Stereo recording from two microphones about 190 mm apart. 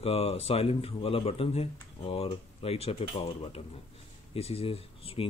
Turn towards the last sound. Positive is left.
turn(degrees=30)  # may be behind; listen again after turning